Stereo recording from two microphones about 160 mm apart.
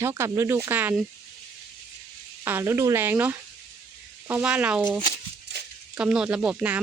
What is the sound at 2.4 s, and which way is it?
Speech, 15° right (ahead or behind).